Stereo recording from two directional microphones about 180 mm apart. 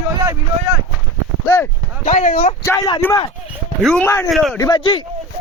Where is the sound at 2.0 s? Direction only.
45° left (ahead or behind).